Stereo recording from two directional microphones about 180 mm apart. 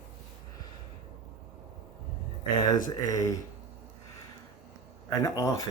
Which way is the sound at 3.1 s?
20° left (ahead or behind).